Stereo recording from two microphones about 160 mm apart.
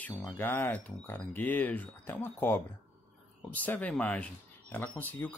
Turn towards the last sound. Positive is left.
turn(degrees=10)  # may be behind; listen again after turning